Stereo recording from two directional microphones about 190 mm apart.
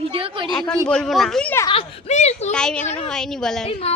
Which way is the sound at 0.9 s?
5° left (ahead or behind).